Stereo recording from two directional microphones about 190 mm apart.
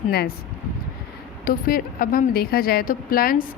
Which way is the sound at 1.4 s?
50° left (ahead or behind).